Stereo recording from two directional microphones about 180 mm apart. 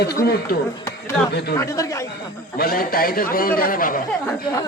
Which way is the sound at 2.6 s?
55° left (ahead or behind).